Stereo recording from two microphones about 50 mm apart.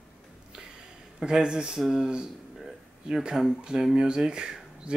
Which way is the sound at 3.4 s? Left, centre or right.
Centre.